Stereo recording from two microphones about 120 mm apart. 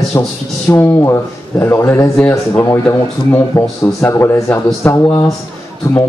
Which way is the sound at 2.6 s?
25° left (ahead or behind).